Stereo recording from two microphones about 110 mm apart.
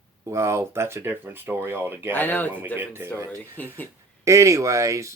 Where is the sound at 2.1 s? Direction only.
15° left (ahead or behind).